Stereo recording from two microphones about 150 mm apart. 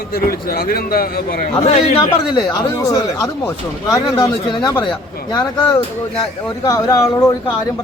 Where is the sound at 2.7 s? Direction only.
25° left (ahead or behind).